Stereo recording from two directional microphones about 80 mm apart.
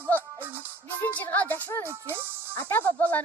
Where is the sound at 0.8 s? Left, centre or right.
Left.